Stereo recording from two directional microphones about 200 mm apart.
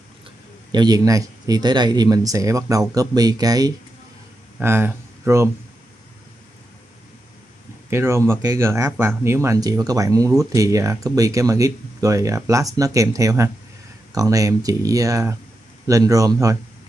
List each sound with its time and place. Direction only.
0.7 s speech: 20° right (ahead or behind)
7.9 s speech: 15° right (ahead or behind)